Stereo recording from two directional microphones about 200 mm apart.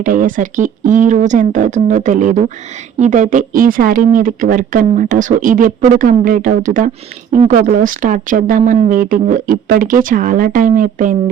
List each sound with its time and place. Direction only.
0.0 s speech: 40° right (ahead or behind)